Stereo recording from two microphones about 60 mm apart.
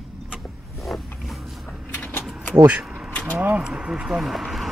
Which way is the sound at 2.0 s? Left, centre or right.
Left.